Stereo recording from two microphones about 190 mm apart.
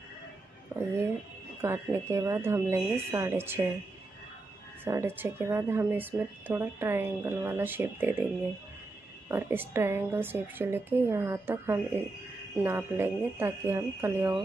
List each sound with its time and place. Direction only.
0.7 s speech: 15° right (ahead or behind)
4.8 s speech: 10° right (ahead or behind)
9.3 s speech: 10° right (ahead or behind)